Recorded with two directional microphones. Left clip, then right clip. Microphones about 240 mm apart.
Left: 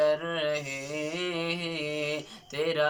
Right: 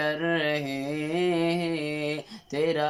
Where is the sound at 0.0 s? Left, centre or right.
Right.